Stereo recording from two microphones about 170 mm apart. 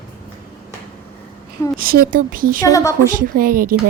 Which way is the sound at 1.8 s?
60° right (ahead or behind).